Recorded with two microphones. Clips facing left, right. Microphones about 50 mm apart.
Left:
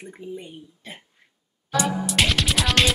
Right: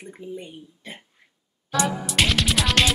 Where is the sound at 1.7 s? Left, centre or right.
Centre.